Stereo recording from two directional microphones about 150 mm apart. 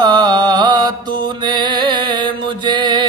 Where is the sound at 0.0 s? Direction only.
30° right (ahead or behind).